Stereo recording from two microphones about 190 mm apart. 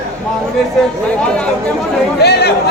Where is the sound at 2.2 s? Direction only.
60° left (ahead or behind).